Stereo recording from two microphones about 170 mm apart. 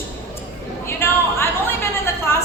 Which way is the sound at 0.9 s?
15° left (ahead or behind).